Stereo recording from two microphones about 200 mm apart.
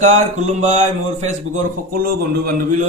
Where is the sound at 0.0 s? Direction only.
35° right (ahead or behind).